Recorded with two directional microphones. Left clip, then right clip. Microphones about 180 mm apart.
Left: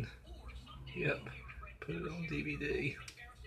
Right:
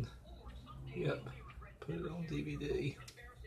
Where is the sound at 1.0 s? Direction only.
Centre (ahead or behind).